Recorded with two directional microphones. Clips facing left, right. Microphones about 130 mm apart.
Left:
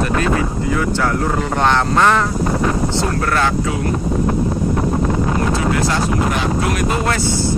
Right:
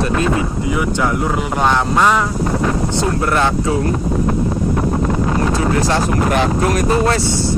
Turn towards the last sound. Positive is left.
turn(degrees=-40)  # may be behind; listen again after turning